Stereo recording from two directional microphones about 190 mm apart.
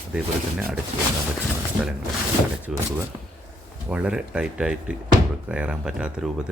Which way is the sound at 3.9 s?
5° right (ahead or behind).